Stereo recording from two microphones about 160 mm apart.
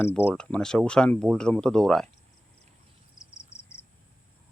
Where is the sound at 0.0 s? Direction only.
15° left (ahead or behind).